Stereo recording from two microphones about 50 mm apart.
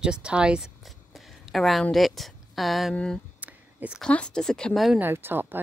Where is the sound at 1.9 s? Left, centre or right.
Centre.